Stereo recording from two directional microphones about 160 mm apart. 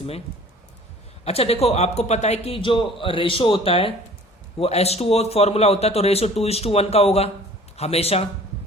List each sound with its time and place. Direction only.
1.2 s a man's voice: 40° left (ahead or behind)